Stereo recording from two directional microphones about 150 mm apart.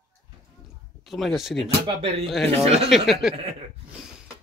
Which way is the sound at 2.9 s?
Centre (ahead or behind).